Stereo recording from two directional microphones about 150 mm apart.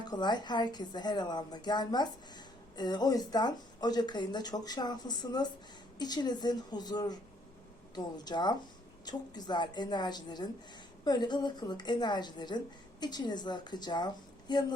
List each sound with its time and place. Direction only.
0.0 s a woman's voice: 30° left (ahead or behind)